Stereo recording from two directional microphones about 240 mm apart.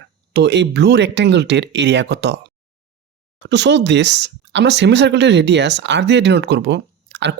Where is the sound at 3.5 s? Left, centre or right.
Right.